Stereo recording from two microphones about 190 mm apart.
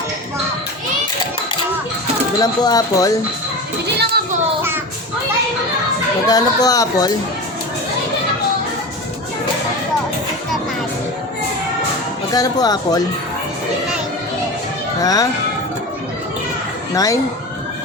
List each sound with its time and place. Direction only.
2.4 s speech: 20° left (ahead or behind)
3.9 s a sound: 60° right (ahead or behind)
6.2 s speech: 20° left (ahead or behind)
12.3 s speech: 20° left (ahead or behind)
15.0 s speech: 20° left (ahead or behind)
16.9 s speech: 20° left (ahead or behind)